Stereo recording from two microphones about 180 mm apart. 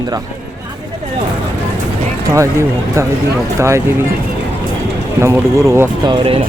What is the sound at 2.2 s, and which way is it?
Speech, 15° right (ahead or behind).